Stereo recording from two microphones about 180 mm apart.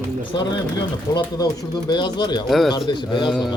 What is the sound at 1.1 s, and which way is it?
Speech, 25° left (ahead or behind).